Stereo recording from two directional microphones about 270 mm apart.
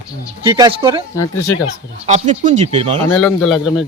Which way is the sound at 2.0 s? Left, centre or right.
Right.